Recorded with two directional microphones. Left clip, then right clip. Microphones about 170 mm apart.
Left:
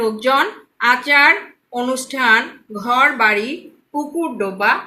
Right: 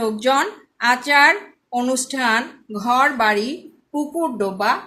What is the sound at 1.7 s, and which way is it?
Speech, 60° right (ahead or behind).